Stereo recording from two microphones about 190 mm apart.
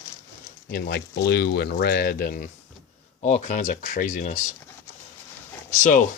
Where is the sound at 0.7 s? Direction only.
60° left (ahead or behind).